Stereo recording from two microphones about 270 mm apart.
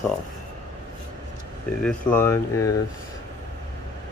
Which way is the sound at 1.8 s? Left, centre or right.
Centre.